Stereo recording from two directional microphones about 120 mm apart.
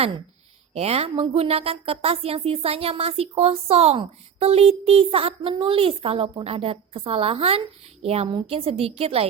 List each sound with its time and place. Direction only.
0.7 s a woman's voice: 60° right (ahead or behind)